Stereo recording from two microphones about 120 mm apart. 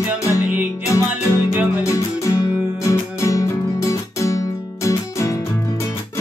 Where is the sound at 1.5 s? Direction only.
15° right (ahead or behind).